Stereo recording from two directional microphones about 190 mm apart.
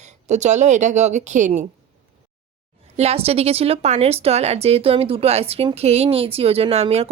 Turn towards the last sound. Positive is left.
turn(degrees=-30)  # may be behind; listen again after turning